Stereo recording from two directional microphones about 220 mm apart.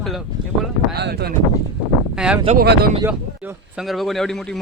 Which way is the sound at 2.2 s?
5° right (ahead or behind).